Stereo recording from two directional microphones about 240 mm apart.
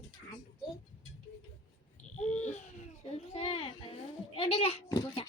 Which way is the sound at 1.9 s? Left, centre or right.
Left.